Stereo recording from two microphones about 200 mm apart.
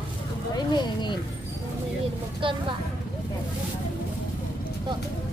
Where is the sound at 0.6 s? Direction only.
20° left (ahead or behind).